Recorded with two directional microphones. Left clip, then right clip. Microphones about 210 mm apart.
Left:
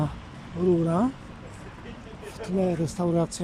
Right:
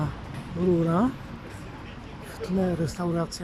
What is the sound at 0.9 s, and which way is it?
Speech, 5° left (ahead or behind).